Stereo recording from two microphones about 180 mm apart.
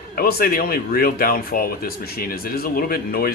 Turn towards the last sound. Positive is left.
turn(degrees=55)  # may be behind; listen again after turning